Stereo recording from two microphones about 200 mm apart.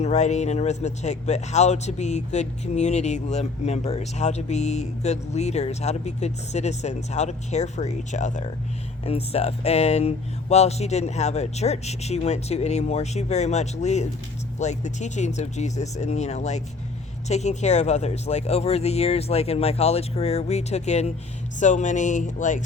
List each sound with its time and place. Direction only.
0.0 s speech: 35° left (ahead or behind)